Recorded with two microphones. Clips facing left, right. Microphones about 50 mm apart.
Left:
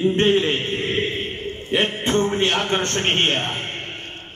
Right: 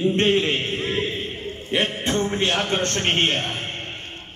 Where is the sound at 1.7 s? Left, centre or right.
Left.